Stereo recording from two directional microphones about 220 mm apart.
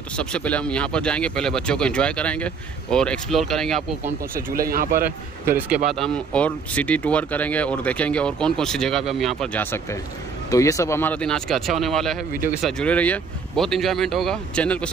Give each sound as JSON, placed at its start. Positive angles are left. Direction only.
{"t": 0.1, "sound": "speech", "side_deg": 5}
{"t": 4.6, "sound": "speech", "side_deg": -40}
{"t": 5.9, "sound": "speech", "side_deg": 0}